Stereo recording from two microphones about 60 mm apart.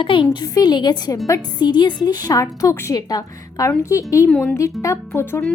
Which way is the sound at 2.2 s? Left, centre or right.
Left.